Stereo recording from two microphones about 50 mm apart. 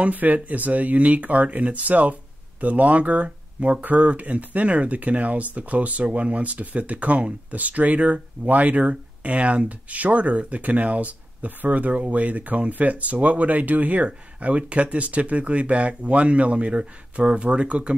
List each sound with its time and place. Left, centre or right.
0.0 s speech: right